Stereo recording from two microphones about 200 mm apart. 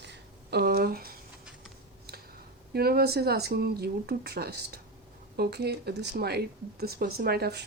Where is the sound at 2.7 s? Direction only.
50° right (ahead or behind).